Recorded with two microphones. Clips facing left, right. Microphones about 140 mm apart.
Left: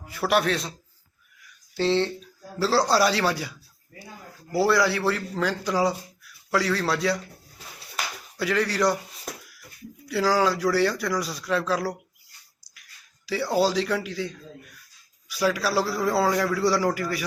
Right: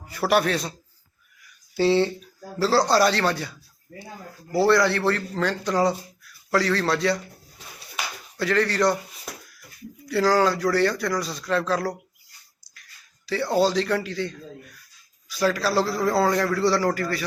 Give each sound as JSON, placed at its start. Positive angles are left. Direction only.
{"t": 0.1, "sound": "a man's voice", "side_deg": 0}
{"t": 1.4, "sound": "a sound", "side_deg": -5}
{"t": 2.6, "sound": "a man's voice", "side_deg": 0}
{"t": 3.9, "sound": "speech", "side_deg": -40}
{"t": 4.5, "sound": "a man's voice", "side_deg": 5}
{"t": 7.6, "sound": "a sound", "side_deg": 5}
{"t": 10.1, "sound": "a man's voice", "side_deg": 5}
{"t": 13.2, "sound": "a man's voice", "side_deg": 5}